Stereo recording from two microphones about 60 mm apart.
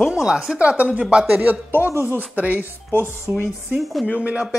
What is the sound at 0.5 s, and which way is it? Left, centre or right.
Speech, right.